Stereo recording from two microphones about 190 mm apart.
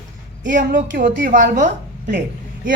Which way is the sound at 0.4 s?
45° right (ahead or behind).